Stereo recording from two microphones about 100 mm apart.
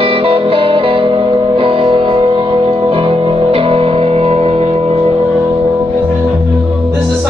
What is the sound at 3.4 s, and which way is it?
Music, 70° right (ahead or behind).